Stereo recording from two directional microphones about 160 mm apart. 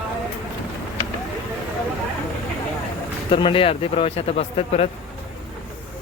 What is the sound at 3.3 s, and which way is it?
Speech, 30° left (ahead or behind).